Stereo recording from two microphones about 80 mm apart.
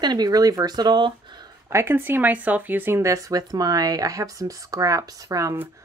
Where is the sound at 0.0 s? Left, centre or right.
Right.